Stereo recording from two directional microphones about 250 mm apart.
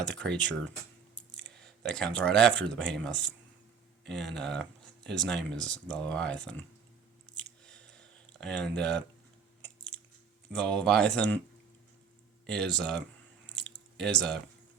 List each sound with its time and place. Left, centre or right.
0.0 s speech: centre
1.4 s a sound: right
1.6 s speech: centre
7.6 s a sound: centre
9.6 s chewing: centre
10.5 s speech: centre
12.5 s speech: centre
13.5 s squish: centre